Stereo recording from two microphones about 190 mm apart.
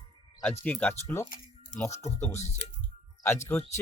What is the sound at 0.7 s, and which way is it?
Speech, 10° left (ahead or behind).